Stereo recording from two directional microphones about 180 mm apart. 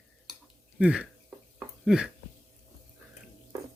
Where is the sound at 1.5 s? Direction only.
Centre (ahead or behind).